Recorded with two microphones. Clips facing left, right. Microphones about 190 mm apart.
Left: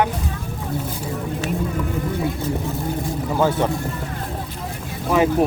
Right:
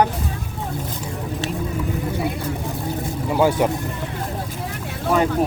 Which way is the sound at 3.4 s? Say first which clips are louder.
Right 2 dB; 10° right (ahead or behind).